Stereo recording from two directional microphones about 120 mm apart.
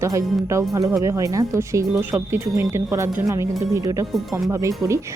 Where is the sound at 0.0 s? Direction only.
25° right (ahead or behind).